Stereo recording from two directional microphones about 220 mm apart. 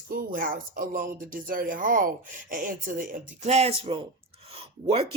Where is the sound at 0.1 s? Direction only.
40° right (ahead or behind).